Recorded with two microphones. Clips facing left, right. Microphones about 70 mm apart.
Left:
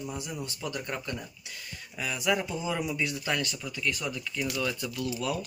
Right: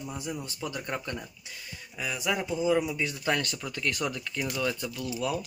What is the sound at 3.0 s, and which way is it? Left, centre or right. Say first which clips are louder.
Speech: right 2 dB; right.